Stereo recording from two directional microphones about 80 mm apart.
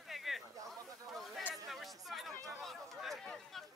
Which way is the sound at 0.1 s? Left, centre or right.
Centre.